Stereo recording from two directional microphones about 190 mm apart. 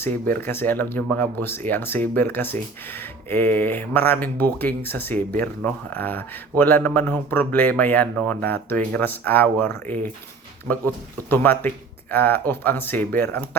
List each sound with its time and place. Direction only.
0.0 s speech: 10° left (ahead or behind)
11.3 s speech: 10° left (ahead or behind)